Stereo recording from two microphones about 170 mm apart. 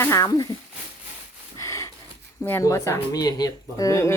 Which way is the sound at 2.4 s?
15° left (ahead or behind).